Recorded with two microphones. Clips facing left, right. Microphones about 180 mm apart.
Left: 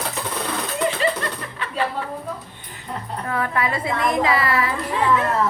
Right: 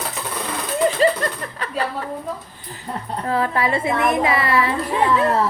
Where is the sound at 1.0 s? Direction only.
40° right (ahead or behind).